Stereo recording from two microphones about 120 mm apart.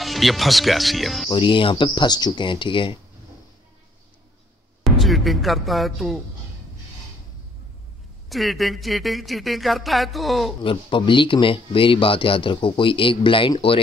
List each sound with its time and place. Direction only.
0.0 s speech: centre (ahead or behind)
1.3 s speech: 40° left (ahead or behind)
4.8 s speech: centre (ahead or behind)
8.3 s speech: centre (ahead or behind)
10.6 s speech: 45° left (ahead or behind)